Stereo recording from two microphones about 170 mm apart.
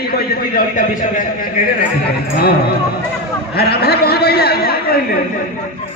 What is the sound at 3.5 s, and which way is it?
A man's voice, 70° left (ahead or behind).